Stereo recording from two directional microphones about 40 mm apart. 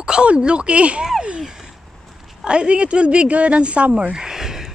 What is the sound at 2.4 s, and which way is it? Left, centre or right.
Speech, right.